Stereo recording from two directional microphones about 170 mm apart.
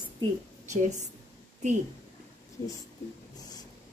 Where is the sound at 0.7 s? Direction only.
45° right (ahead or behind).